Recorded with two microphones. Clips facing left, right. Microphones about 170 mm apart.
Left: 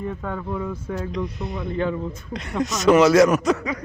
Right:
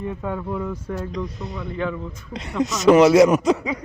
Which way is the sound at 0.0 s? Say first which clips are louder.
Right 1 dB; 5° right (ahead or behind).